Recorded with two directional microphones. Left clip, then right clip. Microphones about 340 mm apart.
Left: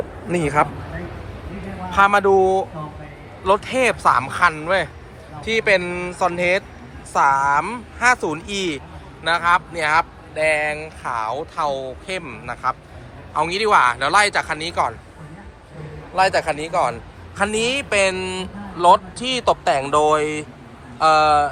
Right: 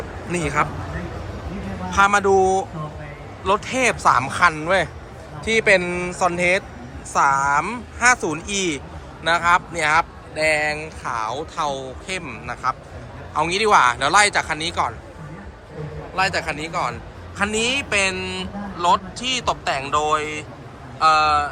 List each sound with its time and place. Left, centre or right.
0.3 s a man's voice: centre
1.9 s a man's voice: centre
16.1 s a man's voice: centre